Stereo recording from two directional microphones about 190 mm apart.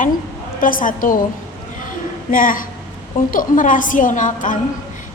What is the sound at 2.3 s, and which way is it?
A woman's voice, 45° left (ahead or behind).